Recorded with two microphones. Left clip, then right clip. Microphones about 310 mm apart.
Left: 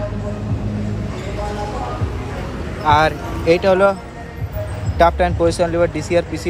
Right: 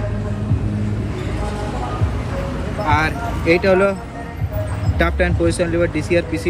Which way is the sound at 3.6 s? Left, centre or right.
Left.